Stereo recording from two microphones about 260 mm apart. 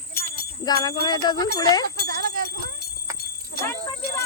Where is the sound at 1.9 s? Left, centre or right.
Right.